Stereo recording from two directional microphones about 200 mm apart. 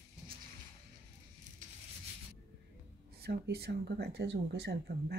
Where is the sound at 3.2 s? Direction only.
50° right (ahead or behind).